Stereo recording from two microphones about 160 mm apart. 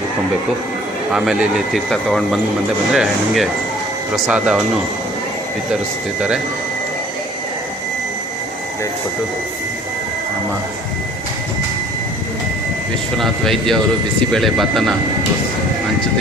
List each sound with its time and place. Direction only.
1.1 s a man's voice: 5° right (ahead or behind)
6.1 s speech: 5° right (ahead or behind)
13.1 s a man's voice: centre (ahead or behind)